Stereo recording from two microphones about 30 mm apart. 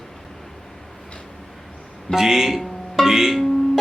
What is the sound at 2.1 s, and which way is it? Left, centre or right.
Speech, centre.